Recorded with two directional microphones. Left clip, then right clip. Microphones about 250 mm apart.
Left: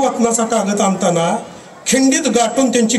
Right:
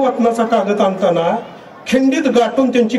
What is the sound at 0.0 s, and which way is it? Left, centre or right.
A man's voice, left.